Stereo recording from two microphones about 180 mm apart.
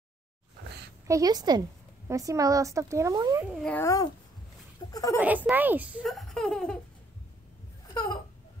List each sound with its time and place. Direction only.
1.0 s a woman's voice: 20° right (ahead or behind)
3.5 s a woman's voice: 10° left (ahead or behind)
5.2 s speech: 10° right (ahead or behind)
6.0 s laughter: centre (ahead or behind)
7.9 s a sound: 25° left (ahead or behind)